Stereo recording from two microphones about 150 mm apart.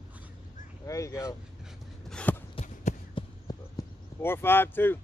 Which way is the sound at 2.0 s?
10° left (ahead or behind).